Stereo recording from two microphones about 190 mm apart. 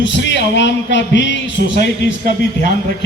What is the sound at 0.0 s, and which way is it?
A man's voice, 65° left (ahead or behind).